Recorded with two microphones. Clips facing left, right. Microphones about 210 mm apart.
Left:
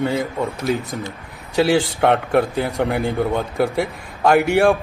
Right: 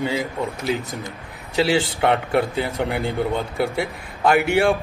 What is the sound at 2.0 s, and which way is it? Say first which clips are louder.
Speech: left 3 dB; 50° left (ahead or behind).